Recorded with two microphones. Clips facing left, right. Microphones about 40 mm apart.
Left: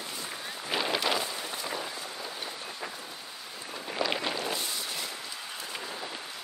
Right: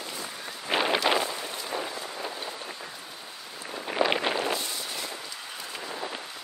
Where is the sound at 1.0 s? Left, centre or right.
Right.